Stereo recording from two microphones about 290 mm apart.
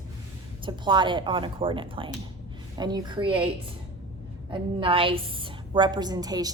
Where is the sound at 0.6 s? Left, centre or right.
Centre.